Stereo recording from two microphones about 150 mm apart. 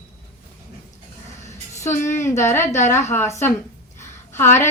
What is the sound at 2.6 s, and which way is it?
Speech, 50° left (ahead or behind).